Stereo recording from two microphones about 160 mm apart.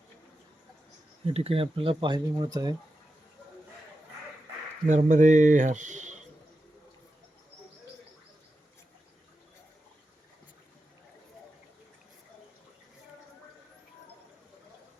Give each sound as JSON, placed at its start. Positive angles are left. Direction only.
{"t": 1.2, "sound": "speech", "side_deg": -40}
{"t": 4.9, "sound": "speech", "side_deg": -50}